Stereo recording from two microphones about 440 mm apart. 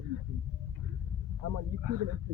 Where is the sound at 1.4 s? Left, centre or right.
Right.